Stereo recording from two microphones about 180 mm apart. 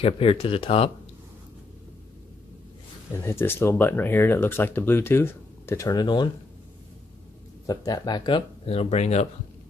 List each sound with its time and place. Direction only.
0.0 s speech: 30° left (ahead or behind)
3.2 s speech: 15° left (ahead or behind)
7.6 s speech: 20° left (ahead or behind); by 9.3 s 40° left (ahead or behind)